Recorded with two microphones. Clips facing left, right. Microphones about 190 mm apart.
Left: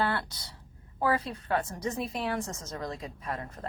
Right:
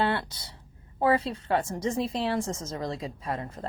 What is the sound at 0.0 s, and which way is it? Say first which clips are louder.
A woman's voice: right 3 dB; 25° right (ahead or behind).